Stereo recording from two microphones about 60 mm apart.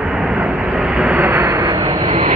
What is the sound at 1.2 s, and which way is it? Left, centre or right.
Vehicle, right.